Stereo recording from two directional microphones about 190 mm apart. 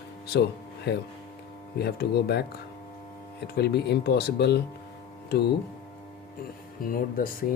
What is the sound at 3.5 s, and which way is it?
Speech, 60° left (ahead or behind).